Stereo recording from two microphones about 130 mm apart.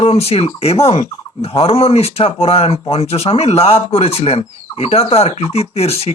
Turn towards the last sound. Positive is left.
turn(degrees=50)  # may be behind; listen again after turning